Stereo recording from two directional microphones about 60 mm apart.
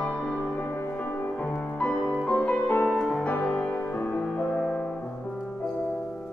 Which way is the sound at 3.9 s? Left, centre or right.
Left.